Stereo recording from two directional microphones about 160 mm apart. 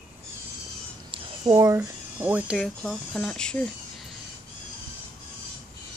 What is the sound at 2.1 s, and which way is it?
Speech, 10° right (ahead or behind).